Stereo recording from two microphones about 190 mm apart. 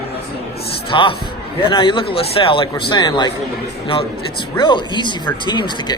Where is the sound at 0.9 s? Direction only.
25° left (ahead or behind).